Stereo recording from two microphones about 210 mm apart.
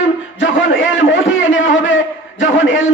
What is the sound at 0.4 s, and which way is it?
A man's voice, 65° left (ahead or behind).